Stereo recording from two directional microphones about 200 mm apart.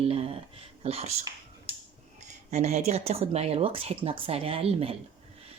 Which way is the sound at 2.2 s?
35° right (ahead or behind).